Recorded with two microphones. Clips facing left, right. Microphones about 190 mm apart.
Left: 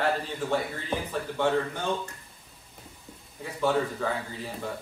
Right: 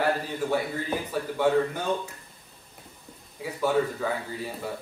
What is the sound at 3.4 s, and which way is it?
Speech, 5° right (ahead or behind).